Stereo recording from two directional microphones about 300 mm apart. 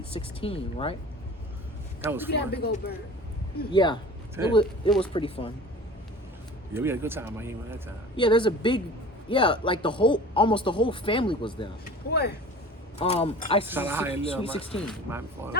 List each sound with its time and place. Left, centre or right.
0.1 s speech: centre
2.0 s speech: centre
2.3 s speech: left
3.7 s speech: centre
4.4 s speech: centre
5.1 s speech: centre
6.7 s speech: centre
8.1 s speech: centre
12.1 s speech: left
13.0 s speech: centre
13.7 s speech: centre
14.1 s speech: centre
15.1 s speech: centre